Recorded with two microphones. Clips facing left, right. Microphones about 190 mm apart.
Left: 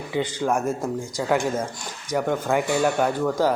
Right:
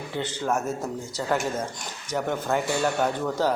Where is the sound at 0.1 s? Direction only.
10° left (ahead or behind).